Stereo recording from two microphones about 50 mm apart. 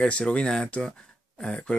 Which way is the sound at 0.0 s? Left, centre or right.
Left.